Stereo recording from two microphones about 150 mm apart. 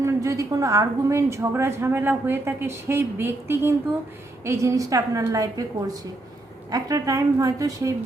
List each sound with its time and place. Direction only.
0.0 s a woman's voice: 20° right (ahead or behind)
6.7 s a woman's voice: 25° right (ahead or behind)